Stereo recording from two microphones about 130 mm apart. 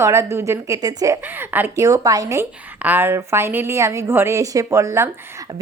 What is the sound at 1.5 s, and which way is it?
Speech, 15° right (ahead or behind).